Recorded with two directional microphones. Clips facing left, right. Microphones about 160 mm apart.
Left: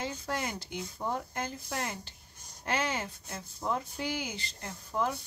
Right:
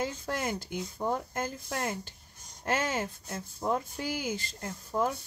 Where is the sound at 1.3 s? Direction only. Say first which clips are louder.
Right 2 dB; 45° right (ahead or behind).